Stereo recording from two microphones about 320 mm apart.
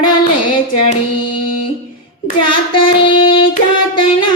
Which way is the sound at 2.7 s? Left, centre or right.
Centre.